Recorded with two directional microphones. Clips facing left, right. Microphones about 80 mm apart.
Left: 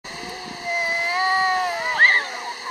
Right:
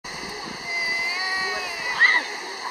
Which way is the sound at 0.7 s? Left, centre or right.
Left.